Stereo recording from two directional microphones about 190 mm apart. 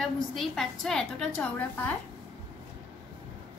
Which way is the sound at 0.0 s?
Centre (ahead or behind).